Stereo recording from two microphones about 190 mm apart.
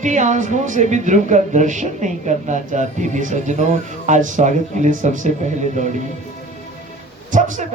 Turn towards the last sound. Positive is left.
turn(degrees=-40)  # may be behind; listen again after turning